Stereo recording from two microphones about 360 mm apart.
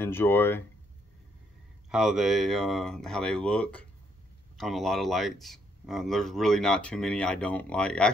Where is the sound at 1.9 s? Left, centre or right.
Centre.